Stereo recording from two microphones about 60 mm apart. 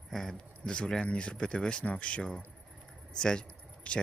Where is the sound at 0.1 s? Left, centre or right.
Centre.